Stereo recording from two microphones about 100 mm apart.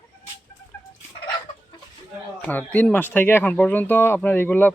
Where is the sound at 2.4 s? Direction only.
15° left (ahead or behind).